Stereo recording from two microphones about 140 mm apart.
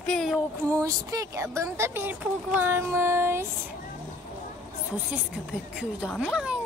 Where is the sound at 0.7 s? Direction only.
25° right (ahead or behind).